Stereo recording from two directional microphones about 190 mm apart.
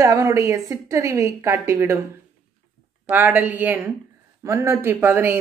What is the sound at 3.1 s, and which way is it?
A woman's voice, 10° right (ahead or behind).